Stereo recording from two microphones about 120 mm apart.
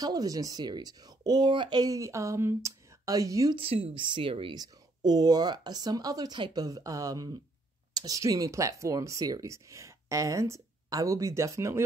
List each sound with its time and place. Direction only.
0.0 s speech: 30° right (ahead or behind)
3.5 s a woman's voice: 50° right (ahead or behind)
4.6 s speech: 35° right (ahead or behind)